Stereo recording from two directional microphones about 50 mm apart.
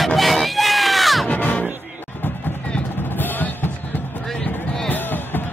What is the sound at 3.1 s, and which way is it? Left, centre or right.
Music, left.